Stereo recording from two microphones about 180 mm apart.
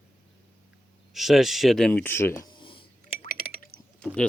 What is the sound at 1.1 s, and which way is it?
Speech, centre (ahead or behind).